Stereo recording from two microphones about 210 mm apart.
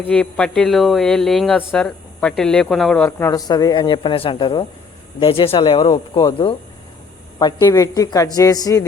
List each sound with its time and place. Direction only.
0.1 s a woman's voice: 5° left (ahead or behind)